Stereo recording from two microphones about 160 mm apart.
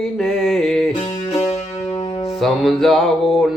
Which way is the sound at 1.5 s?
40° left (ahead or behind).